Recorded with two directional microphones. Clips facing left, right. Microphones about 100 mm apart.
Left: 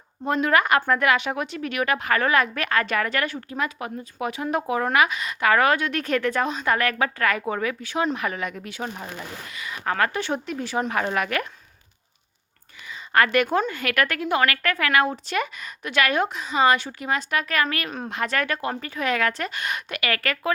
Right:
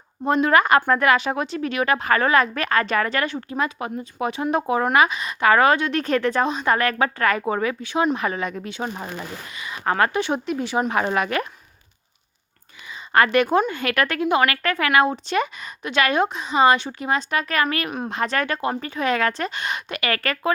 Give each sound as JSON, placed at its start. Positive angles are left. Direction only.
{"t": 0.3, "sound": "a woman's voice", "side_deg": -25}
{"t": 12.9, "sound": "a woman's voice", "side_deg": -25}